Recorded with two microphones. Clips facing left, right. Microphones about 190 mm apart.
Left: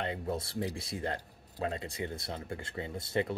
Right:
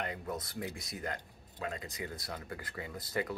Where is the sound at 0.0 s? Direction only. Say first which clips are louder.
Left 4 dB; 30° left (ahead or behind).